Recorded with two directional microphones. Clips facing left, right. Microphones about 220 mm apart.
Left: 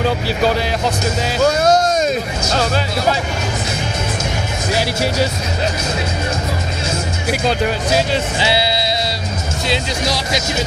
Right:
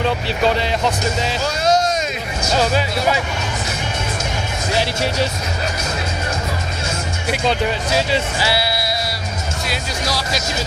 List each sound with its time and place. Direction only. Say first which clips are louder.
1.4 s a sound: left 5 dB; 50° left (ahead or behind)
4.7 s speech: left 2 dB; 10° left (ahead or behind)
7.2 s speech: left 1 dB; centre (ahead or behind)
8.4 s sheep: left 3 dB; 20° left (ahead or behind)
9.7 s speech: left 6 dB; 20° left (ahead or behind)